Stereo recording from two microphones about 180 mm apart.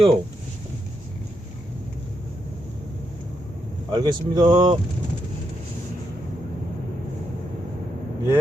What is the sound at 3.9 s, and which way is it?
Speech, 25° right (ahead or behind).